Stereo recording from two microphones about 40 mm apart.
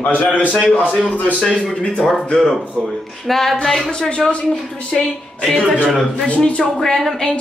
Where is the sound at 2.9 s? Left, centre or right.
Centre.